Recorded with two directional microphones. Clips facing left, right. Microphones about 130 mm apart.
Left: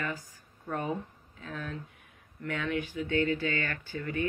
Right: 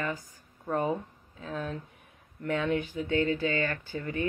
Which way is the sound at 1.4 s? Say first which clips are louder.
Right 4 dB; 25° right (ahead or behind).